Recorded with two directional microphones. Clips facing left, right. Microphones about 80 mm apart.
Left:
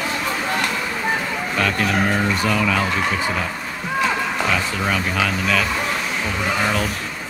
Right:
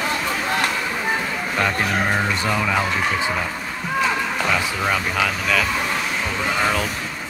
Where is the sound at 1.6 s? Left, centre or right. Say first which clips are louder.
Left 1 dB; centre.